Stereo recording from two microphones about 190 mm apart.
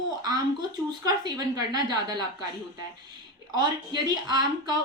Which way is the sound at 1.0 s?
20° right (ahead or behind).